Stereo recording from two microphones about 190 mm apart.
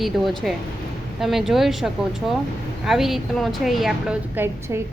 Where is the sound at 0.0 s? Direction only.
Centre (ahead or behind).